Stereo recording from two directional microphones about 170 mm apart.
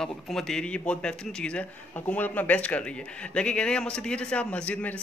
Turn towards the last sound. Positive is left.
turn(degrees=5)  # may be behind; listen again after turning